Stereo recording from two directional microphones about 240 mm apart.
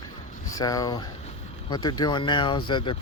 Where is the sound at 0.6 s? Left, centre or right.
Centre.